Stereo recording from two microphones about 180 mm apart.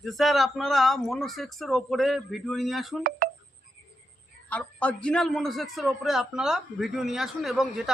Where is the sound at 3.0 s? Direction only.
55° right (ahead or behind).